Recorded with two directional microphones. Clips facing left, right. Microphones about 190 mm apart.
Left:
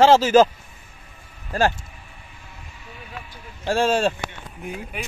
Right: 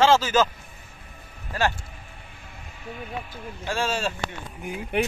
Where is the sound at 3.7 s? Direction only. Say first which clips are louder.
Left 7 dB; 55° left (ahead or behind).